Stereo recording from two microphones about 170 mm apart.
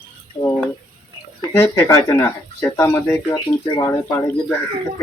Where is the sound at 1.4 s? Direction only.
15° left (ahead or behind).